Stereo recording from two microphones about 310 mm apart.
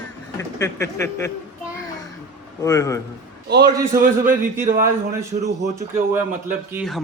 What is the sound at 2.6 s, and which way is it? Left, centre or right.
Speech, centre.